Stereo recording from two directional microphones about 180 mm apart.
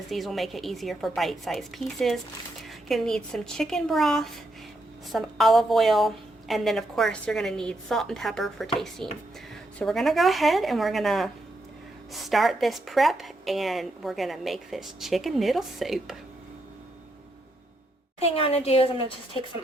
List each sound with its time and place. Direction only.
0.1 s a woman's voice: centre (ahead or behind)
18.3 s a woman's voice: 35° left (ahead or behind)